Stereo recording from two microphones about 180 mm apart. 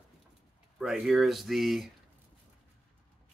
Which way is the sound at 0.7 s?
Centre (ahead or behind).